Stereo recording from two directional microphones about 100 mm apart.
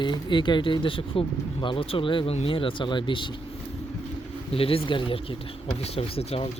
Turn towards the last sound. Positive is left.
turn(degrees=80)